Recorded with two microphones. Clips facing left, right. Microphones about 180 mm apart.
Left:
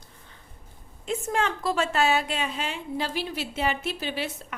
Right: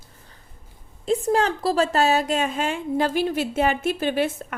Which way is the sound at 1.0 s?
35° right (ahead or behind).